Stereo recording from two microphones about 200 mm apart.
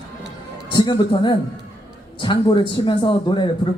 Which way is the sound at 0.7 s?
25° left (ahead or behind).